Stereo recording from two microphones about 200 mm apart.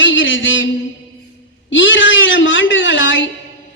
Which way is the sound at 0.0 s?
70° left (ahead or behind).